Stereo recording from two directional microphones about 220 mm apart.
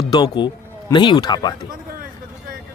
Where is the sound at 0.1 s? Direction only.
20° left (ahead or behind).